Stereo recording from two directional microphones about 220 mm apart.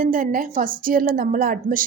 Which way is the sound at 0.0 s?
40° right (ahead or behind).